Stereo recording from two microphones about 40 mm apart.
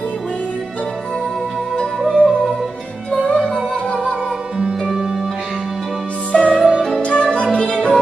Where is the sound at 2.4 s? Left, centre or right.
Centre.